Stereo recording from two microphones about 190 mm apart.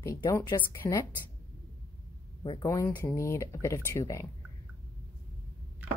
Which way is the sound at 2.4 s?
20° left (ahead or behind).